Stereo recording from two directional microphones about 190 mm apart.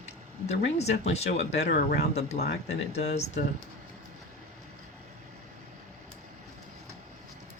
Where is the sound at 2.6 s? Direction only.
35° left (ahead or behind).